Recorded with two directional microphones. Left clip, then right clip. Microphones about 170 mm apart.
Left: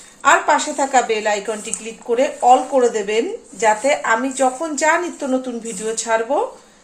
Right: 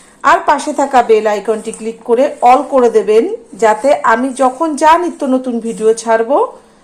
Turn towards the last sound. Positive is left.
turn(degrees=-35)  # may be behind; listen again after turning